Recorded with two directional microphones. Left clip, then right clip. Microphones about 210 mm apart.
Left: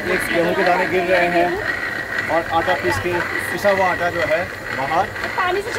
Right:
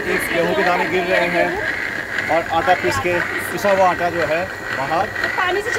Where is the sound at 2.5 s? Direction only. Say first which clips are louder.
Right 2 dB; 15° right (ahead or behind).